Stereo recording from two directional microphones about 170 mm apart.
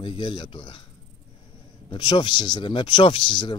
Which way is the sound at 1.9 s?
30° left (ahead or behind).